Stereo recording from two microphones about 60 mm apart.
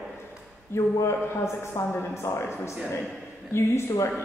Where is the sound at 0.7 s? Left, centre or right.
Left.